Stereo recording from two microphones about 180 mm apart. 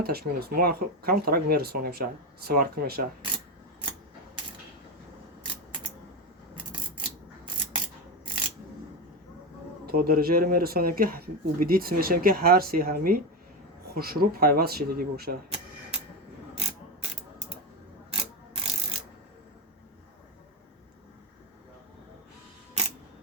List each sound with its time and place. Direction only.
0.0 s speech: 60° right (ahead or behind)
6.9 s mechanisms: 25° right (ahead or behind)
8.2 s a sound: 25° right (ahead or behind)
9.8 s speech: 55° right (ahead or behind)
15.4 s a sound: 35° right (ahead or behind)
18.1 s ratchet: 30° right (ahead or behind)